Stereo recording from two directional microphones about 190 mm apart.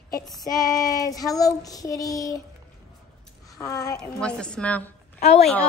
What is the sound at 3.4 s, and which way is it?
Speech, 20° left (ahead or behind).